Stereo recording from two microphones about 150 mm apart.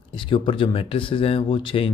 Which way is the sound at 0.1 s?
35° left (ahead or behind).